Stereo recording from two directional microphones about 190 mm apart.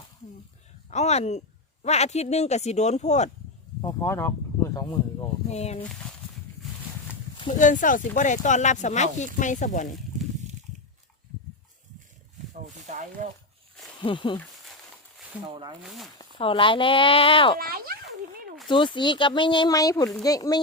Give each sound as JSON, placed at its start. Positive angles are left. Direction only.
{"t": 0.9, "sound": "speech", "side_deg": 35}
{"t": 3.8, "sound": "speech", "side_deg": 15}
{"t": 5.5, "sound": "speech", "side_deg": 35}
{"t": 5.9, "sound": "speech", "side_deg": 5}
{"t": 7.5, "sound": "speech", "side_deg": 40}
{"t": 12.7, "sound": "speech", "side_deg": -40}
{"t": 14.0, "sound": "speech", "side_deg": 25}
{"t": 15.8, "sound": "speech", "side_deg": 0}
{"t": 16.4, "sound": "speech", "side_deg": 25}
{"t": 17.6, "sound": "speech", "side_deg": -50}
{"t": 18.7, "sound": "speech", "side_deg": 25}